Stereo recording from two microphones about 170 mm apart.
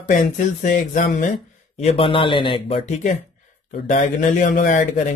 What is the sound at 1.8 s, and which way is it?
Speech, 35° left (ahead or behind).